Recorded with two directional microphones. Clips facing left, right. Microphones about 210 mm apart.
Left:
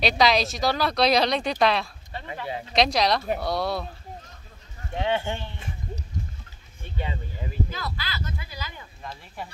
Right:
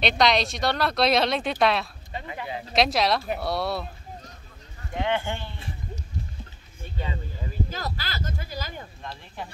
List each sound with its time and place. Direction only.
0.0 s speech: centre (ahead or behind)
2.1 s speech: 15° right (ahead or behind)
2.7 s speech: centre (ahead or behind)
4.9 s speech: 25° left (ahead or behind)
7.7 s speech: 45° right (ahead or behind)